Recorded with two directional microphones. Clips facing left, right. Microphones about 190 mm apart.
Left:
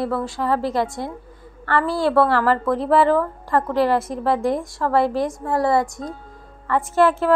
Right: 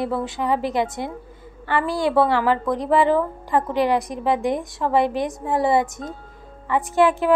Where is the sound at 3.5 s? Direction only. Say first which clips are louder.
Left 1 dB; 20° right (ahead or behind).